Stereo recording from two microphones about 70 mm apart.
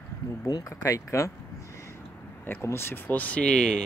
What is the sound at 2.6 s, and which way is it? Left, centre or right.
Speech, left.